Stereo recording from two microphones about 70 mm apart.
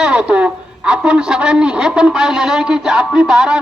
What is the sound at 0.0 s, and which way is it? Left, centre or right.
A man's voice, centre.